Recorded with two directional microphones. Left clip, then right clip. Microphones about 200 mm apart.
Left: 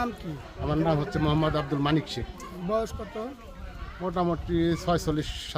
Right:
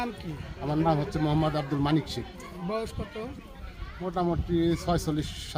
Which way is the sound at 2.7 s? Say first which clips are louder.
Left 5 dB; 30° left (ahead or behind).